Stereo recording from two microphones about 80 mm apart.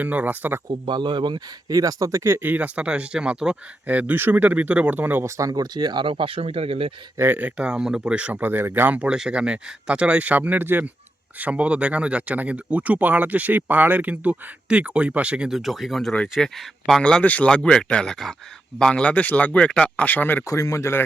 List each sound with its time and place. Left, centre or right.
0.0 s speech: right
0.7 s a man's voice: right
1.7 s speech: right
5.2 s speech: right
5.7 s a man's voice: right
7.2 s speech: right; by 20.4 s left
20.5 s speech: left